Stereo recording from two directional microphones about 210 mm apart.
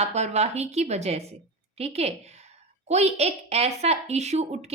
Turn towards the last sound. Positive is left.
turn(degrees=-30)  # may be behind; listen again after turning